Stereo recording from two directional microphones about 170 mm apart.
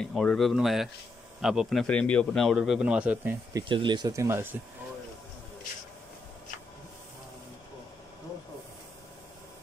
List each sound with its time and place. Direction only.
0.0 s speech: 5° left (ahead or behind)
3.5 s speech: 30° right (ahead or behind)